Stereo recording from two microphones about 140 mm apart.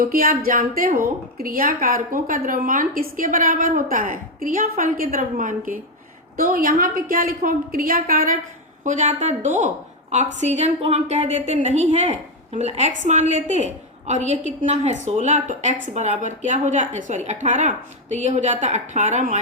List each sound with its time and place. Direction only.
0.0 s a woman's voice: 90° right; by 5.8 s 70° right (ahead or behind)
6.3 s a woman's voice: 90° right
8.8 s a woman's voice: 60° right (ahead or behind)